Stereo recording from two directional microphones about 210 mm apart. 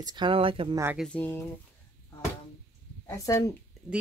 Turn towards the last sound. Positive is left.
turn(degrees=0)  # may be behind; listen again after turning